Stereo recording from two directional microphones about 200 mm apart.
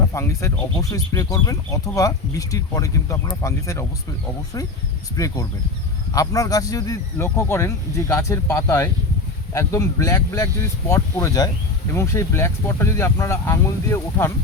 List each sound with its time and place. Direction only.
0.1 s speech: 15° left (ahead or behind)
5.1 s speech: 15° left (ahead or behind)